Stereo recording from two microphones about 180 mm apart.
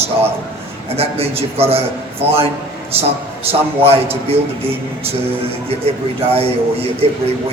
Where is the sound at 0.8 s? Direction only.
35° right (ahead or behind).